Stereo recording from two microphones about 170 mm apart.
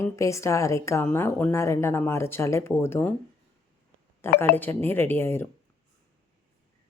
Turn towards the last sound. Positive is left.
turn(degrees=15)  # may be behind; listen again after turning